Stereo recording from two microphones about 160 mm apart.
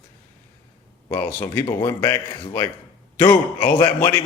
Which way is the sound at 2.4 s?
30° left (ahead or behind).